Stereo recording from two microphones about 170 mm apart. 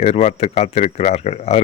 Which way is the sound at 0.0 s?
40° left (ahead or behind).